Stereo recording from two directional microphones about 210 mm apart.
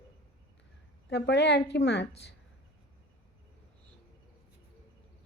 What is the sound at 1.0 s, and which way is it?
A woman's voice, 55° left (ahead or behind).